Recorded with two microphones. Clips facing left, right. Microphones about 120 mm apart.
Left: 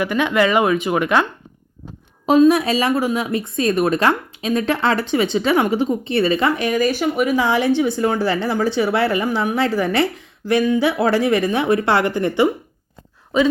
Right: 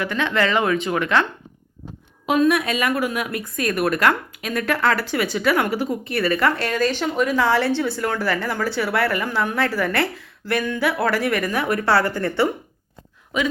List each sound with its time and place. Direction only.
0.0 s speech: 15° left (ahead or behind)
2.2 s speech: 30° left (ahead or behind)
13.3 s a woman's voice: 30° left (ahead or behind)